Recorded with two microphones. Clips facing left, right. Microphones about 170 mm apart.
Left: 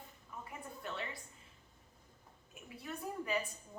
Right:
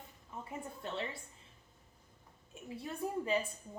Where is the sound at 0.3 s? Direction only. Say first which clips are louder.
Right 4 dB; 25° right (ahead or behind).